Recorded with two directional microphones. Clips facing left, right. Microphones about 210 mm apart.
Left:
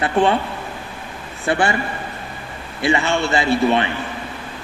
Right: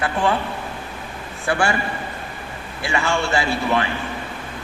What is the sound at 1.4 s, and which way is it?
Speech, 20° left (ahead or behind).